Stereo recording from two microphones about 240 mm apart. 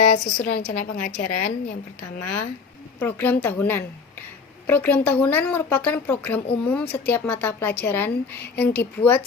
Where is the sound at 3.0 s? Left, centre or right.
Centre.